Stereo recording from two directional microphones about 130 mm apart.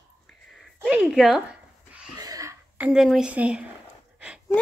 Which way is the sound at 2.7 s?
10° right (ahead or behind).